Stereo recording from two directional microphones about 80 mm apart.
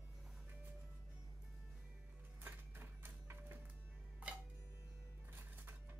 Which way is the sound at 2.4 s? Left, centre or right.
Right.